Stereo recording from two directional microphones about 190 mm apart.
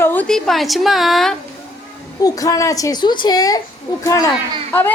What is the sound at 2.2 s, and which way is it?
A woman's voice, 20° left (ahead or behind).